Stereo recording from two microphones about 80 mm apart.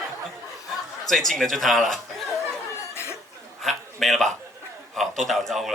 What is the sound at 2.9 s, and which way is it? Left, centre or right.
Chuckle, left.